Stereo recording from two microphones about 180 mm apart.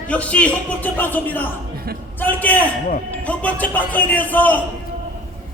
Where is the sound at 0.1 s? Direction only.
5° left (ahead or behind).